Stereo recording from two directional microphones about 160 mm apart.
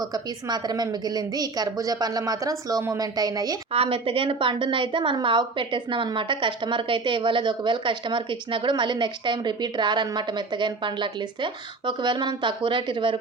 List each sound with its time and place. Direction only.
0.0 s a woman's voice: 25° right (ahead or behind)
3.7 s a woman's voice: 35° right (ahead or behind)